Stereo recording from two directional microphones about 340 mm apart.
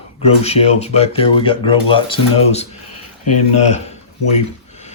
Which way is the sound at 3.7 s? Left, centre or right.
Centre.